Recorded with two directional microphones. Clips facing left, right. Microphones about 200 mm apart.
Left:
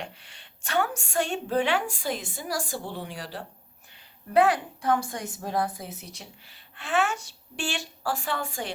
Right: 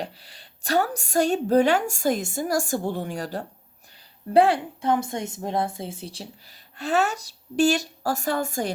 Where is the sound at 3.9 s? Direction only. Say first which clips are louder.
Right 5 dB; 35° right (ahead or behind).